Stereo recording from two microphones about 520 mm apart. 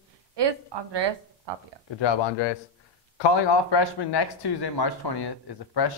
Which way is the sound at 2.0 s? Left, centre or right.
Left.